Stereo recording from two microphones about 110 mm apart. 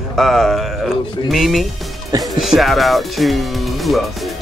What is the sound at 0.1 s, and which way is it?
Speech, centre (ahead or behind).